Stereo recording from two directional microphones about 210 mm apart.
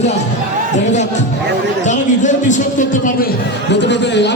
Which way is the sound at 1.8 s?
35° left (ahead or behind).